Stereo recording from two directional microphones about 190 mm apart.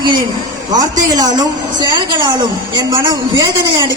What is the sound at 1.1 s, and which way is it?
Speech, 20° right (ahead or behind).